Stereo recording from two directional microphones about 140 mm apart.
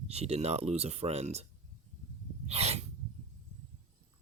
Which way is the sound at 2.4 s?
50° right (ahead or behind).